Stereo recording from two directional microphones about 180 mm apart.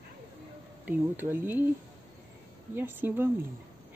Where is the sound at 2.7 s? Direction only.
10° right (ahead or behind).